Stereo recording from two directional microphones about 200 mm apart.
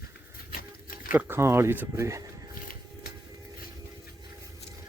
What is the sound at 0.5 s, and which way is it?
Pig, 45° left (ahead or behind).